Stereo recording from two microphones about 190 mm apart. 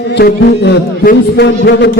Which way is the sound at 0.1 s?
65° left (ahead or behind).